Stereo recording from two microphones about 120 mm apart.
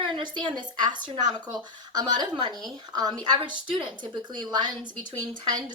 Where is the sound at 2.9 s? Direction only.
35° right (ahead or behind).